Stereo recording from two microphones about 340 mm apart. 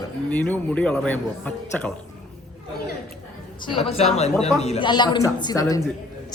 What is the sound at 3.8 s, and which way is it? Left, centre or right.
A man's voice, centre.